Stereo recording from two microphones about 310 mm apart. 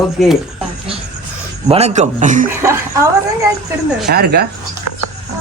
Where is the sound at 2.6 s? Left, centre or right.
Centre.